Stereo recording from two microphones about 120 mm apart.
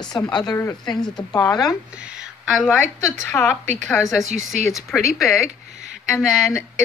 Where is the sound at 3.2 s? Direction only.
15° left (ahead or behind).